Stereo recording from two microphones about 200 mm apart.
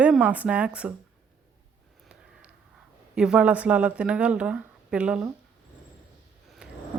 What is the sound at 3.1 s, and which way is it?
Speech, 5° right (ahead or behind).